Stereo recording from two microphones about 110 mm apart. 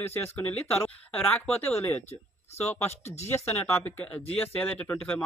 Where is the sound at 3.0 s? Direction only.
90° left.